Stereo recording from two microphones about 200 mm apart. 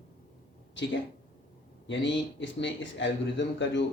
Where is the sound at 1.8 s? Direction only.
65° left (ahead or behind).